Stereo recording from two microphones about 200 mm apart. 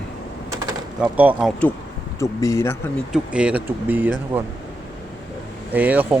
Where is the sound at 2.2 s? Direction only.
15° left (ahead or behind).